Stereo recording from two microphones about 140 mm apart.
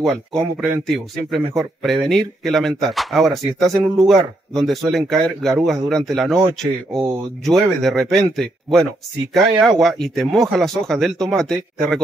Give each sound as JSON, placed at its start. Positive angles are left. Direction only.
{"t": 0.0, "sound": "speech", "side_deg": 0}